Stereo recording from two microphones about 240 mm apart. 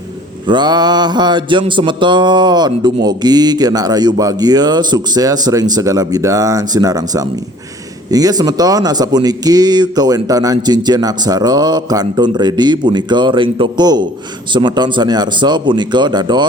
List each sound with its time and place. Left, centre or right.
0.4 s mantra: centre
14.5 s speech: centre